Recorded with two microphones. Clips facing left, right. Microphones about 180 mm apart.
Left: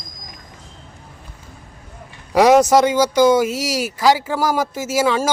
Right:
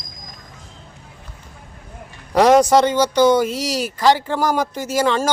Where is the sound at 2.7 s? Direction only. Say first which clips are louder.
Left 1 dB; 10° left (ahead or behind).